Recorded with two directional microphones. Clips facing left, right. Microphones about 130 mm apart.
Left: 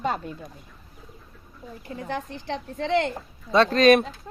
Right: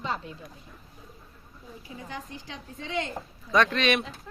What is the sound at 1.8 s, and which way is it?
A woman's voice, 65° left (ahead or behind).